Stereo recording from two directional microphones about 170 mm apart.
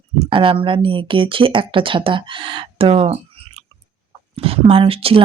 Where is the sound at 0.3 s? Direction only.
30° right (ahead or behind).